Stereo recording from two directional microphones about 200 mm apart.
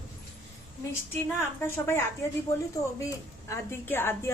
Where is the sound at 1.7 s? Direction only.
10° left (ahead or behind).